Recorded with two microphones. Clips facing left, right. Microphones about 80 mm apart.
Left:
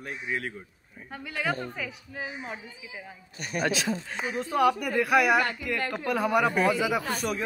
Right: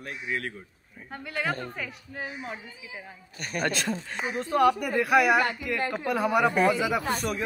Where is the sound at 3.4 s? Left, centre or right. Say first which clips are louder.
Left 1 dB; right.